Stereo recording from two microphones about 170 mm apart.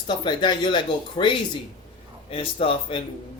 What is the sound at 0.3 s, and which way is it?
Speech, 25° left (ahead or behind).